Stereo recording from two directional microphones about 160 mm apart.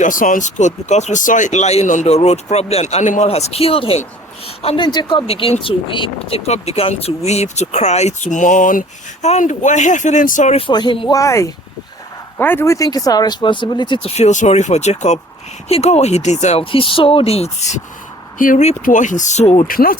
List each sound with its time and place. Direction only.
0.0 s speech: 55° left (ahead or behind); by 4.9 s 40° left (ahead or behind)
4.9 s speech: 25° left (ahead or behind)
11.2 s speech: 20° left (ahead or behind)
14.2 s speech: 45° left (ahead or behind)
18.3 s speech: 55° left (ahead or behind)
19.6 s speech: 65° left (ahead or behind)